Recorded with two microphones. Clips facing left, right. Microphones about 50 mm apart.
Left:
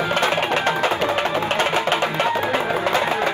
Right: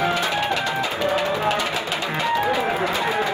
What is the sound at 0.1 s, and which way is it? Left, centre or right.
Music, left.